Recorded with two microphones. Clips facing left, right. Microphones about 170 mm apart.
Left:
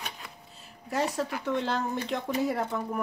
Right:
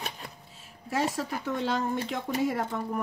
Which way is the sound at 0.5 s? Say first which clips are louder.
Even; 5° right (ahead or behind).